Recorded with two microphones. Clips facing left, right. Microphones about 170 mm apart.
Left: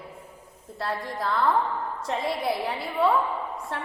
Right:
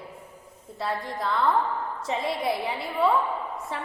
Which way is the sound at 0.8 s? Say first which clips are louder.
Even; centre (ahead or behind).